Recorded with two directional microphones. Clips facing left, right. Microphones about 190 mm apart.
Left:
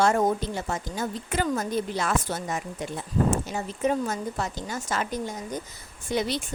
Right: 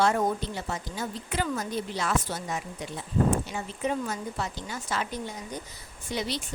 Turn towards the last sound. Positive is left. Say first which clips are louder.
# left 5 dB
turn(degrees=50)  # may be behind; listen again after turning